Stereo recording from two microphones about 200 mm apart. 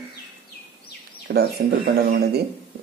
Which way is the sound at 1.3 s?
50° right (ahead or behind).